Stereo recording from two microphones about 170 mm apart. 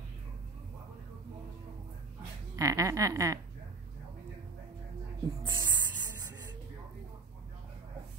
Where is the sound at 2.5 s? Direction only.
20° right (ahead or behind).